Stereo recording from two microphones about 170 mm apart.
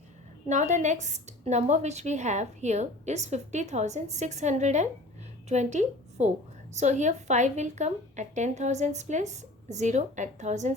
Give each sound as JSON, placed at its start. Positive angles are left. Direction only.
{"t": 0.4, "sound": "a woman's voice", "side_deg": -45}